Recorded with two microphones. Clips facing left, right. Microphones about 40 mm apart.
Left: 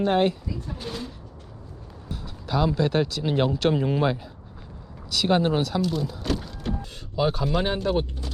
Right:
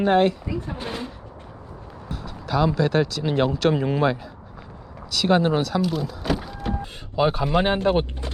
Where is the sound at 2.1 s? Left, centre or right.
Centre.